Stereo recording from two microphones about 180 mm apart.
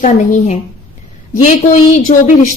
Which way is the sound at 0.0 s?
45° left (ahead or behind).